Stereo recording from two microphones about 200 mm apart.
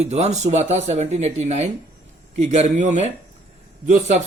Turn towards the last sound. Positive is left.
turn(degrees=-40)  # may be behind; listen again after turning